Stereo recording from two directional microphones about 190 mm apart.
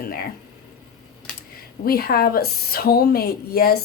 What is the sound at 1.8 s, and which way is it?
A woman's voice, 50° left (ahead or behind).